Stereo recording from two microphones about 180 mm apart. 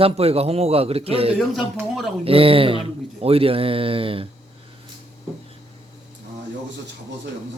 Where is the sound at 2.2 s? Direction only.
30° right (ahead or behind).